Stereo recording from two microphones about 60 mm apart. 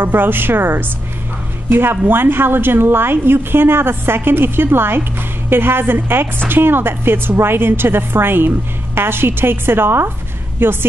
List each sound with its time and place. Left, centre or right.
0.0 s a woman's voice: right